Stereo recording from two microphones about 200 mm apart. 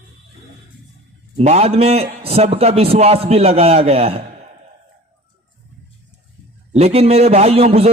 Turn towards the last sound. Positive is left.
turn(degrees=-30)  # may be behind; listen again after turning